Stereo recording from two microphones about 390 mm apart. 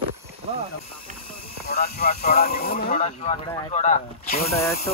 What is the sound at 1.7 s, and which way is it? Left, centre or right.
Speech, left.